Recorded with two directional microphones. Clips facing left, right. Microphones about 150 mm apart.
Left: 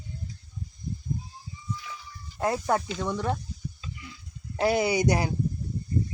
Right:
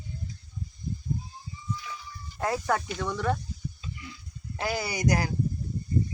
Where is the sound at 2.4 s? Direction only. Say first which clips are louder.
Left 2 dB; 25° left (ahead or behind).